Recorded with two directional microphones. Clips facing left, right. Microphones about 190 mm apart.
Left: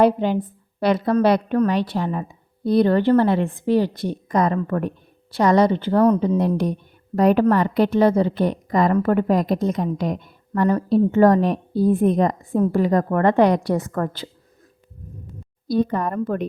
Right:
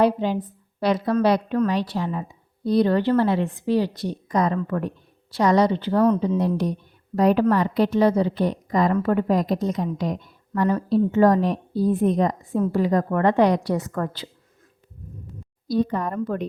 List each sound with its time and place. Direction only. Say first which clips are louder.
0.0 s a woman's voice: left 3 dB; 55° left (ahead or behind)
6.1 s a woman's voice: left 2 dB; 55° left (ahead or behind)
15.6 s a woman's voice: left 2 dB; 55° left (ahead or behind)